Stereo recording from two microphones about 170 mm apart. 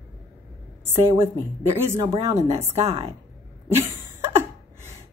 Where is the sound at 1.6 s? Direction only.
15° right (ahead or behind).